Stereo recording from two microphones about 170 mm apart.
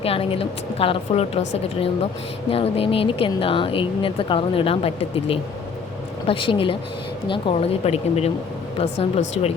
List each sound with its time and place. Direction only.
0.0 s speech: 35° left (ahead or behind)